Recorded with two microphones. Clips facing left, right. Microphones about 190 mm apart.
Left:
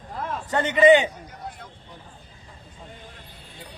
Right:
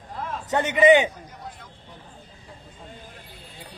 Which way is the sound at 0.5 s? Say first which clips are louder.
Even; 10° right (ahead or behind).